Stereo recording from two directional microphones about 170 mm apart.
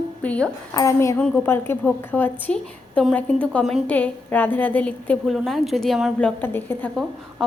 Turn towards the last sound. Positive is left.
turn(degrees=10)  # may be behind; listen again after turning